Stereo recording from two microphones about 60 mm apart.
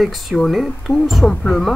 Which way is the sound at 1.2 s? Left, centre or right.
Centre.